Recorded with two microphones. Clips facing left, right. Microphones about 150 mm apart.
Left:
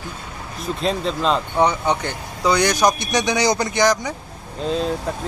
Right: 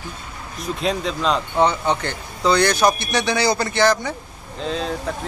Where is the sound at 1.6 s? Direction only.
15° left (ahead or behind).